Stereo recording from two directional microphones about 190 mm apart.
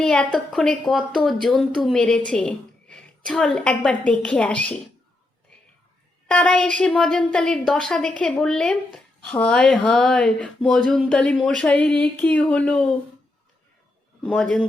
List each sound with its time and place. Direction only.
0.0 s a woman's voice: 5° left (ahead or behind)
6.2 s a woman's voice: 5° left (ahead or behind)
14.2 s a woman's voice: 5° left (ahead or behind)